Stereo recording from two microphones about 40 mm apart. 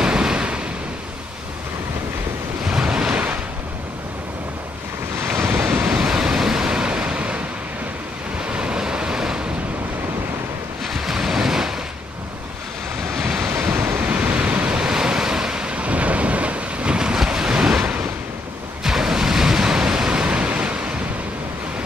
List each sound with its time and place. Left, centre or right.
0.0 s waves: right
2.6 s waves: right
5.9 s waves: right
8.4 s waves: right
10.9 s waves: centre
13.2 s waves: centre
13.5 s waves: right
14.7 s waves: centre
15.7 s waves: right